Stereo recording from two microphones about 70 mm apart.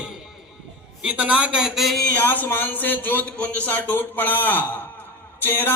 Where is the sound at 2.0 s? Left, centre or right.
Left.